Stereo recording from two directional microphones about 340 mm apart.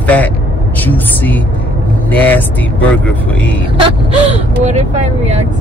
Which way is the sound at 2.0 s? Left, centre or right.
Centre.